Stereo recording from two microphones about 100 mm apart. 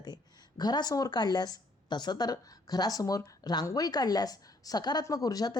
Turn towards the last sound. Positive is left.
turn(degrees=40)  # may be behind; listen again after turning